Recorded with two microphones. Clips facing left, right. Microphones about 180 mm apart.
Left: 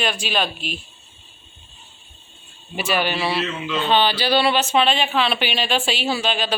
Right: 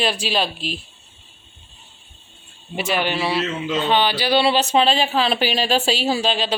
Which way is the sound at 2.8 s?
20° right (ahead or behind).